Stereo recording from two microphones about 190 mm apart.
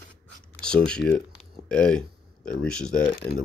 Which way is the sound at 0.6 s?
5° left (ahead or behind).